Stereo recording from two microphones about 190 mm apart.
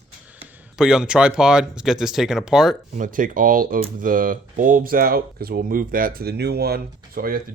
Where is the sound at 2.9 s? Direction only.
45° right (ahead or behind).